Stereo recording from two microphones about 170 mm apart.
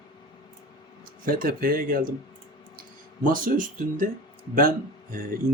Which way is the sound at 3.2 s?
55° right (ahead or behind).